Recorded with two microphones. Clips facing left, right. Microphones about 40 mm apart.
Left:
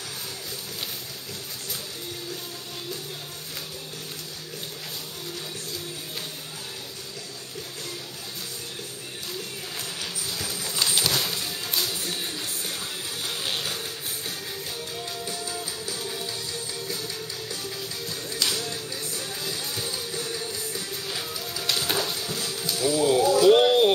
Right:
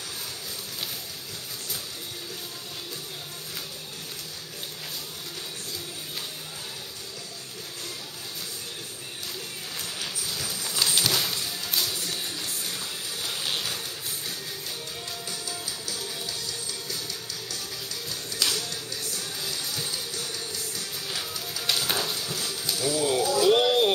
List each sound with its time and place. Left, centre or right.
9.8 s bee: centre
15.2 s music: centre
23.4 s a sound: centre